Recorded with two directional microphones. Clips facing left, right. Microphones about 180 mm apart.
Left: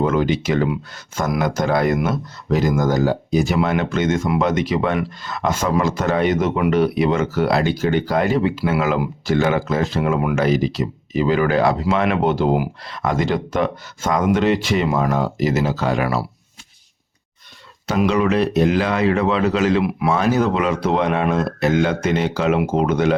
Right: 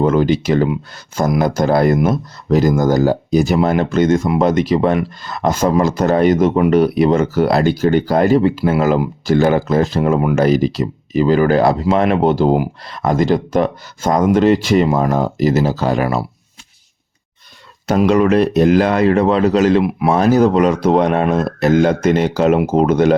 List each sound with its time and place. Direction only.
0.0 s speech: 35° right (ahead or behind)
17.8 s speech: 45° right (ahead or behind)
19.8 s speech: 25° right (ahead or behind)
20.1 s speech: 40° right (ahead or behind)